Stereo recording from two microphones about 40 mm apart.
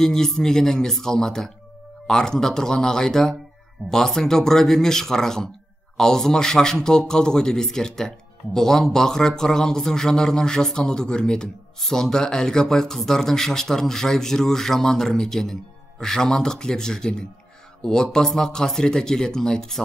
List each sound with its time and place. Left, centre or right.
0.0 s speech: centre